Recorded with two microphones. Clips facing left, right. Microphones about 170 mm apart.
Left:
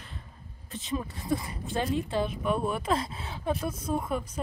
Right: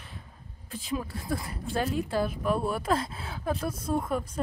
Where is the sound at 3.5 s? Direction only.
10° left (ahead or behind).